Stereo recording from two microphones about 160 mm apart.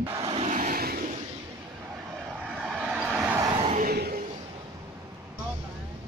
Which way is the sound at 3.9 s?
75° right (ahead or behind).